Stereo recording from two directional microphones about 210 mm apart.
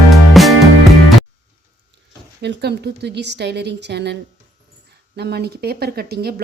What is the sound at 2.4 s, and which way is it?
A woman's voice, 55° right (ahead or behind).